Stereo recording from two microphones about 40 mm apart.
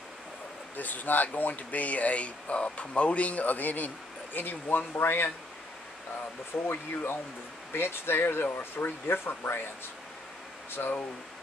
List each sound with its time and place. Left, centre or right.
0.7 s speech: left
6.5 s speech: left
10.8 s speech: left